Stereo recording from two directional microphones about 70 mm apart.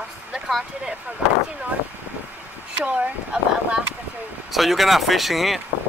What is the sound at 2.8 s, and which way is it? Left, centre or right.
Speech, right.